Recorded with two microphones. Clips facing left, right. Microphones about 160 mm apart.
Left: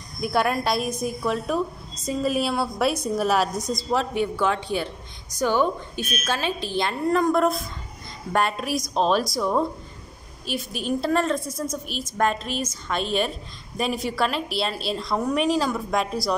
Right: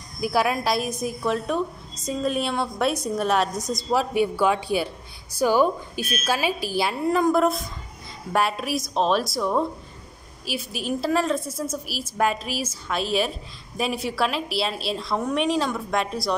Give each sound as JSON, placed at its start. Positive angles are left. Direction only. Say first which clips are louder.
{"t": 0.2, "sound": "a woman's voice", "louder": "even", "side_deg": 0}